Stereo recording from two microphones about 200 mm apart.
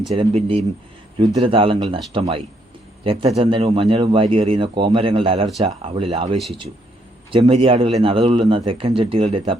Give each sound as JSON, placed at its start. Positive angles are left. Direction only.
{"t": 0.1, "sound": "a man's voice", "side_deg": -30}
{"t": 6.3, "sound": "speech", "side_deg": 0}
{"t": 7.3, "sound": "a man's voice", "side_deg": -30}